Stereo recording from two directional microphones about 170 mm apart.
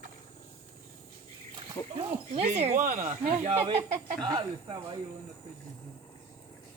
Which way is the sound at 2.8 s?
55° right (ahead or behind).